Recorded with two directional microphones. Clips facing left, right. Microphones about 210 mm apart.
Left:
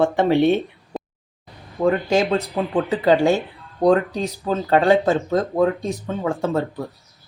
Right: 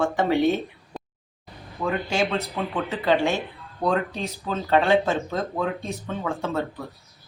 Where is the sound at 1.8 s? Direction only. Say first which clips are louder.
Left 7 dB; 40° left (ahead or behind).